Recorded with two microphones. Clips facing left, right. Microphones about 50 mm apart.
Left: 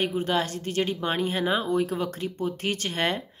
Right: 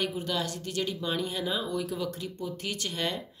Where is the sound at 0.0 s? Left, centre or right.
Left.